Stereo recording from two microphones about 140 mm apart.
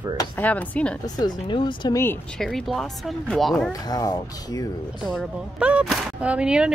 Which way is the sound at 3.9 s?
25° left (ahead or behind).